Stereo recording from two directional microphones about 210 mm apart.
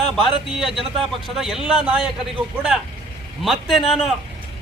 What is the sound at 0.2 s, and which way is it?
Speech, centre (ahead or behind).